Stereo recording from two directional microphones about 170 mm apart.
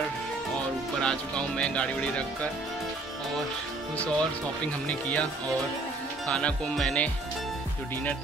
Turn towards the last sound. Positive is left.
turn(degrees=5)  # may be behind; listen again after turning